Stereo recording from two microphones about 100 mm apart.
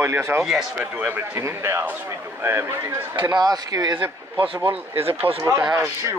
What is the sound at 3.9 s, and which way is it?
Speech, 15° right (ahead or behind).